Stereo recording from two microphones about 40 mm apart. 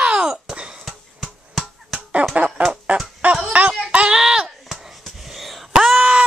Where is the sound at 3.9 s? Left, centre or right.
Right.